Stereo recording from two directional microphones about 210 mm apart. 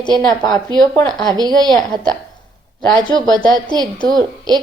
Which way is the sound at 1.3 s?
20° right (ahead or behind).